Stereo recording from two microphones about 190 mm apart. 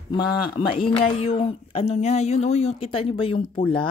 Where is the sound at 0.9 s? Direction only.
30° left (ahead or behind).